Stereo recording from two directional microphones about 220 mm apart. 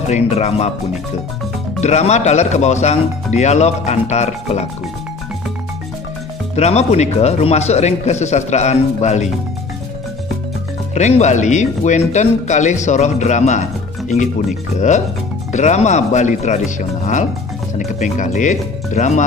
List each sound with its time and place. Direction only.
0.1 s speech: 30° left (ahead or behind)
1.8 s speech: 30° left (ahead or behind)
6.5 s speech: 30° left (ahead or behind)
11.0 s speech: 30° left (ahead or behind)
15.5 s speech: 30° left (ahead or behind)